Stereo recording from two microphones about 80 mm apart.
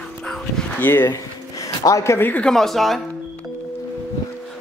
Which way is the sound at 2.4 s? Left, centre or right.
Centre.